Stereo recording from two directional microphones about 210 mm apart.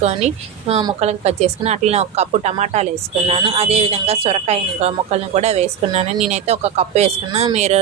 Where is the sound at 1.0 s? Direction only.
30° right (ahead or behind).